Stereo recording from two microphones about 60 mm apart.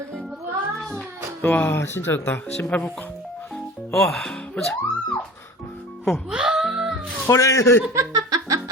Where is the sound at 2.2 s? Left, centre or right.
Left.